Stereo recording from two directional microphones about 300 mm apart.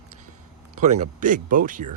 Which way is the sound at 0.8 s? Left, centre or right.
Right.